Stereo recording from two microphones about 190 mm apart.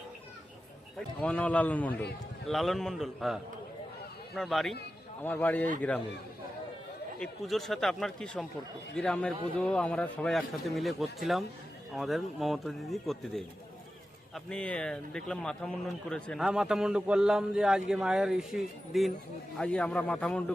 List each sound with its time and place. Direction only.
1.2 s a man's voice: 5° left (ahead or behind)
7.2 s speech: centre (ahead or behind)